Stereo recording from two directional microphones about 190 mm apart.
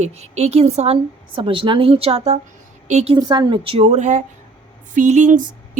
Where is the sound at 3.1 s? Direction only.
25° right (ahead or behind).